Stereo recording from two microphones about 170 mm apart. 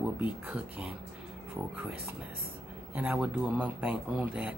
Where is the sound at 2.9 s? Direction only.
10° right (ahead or behind).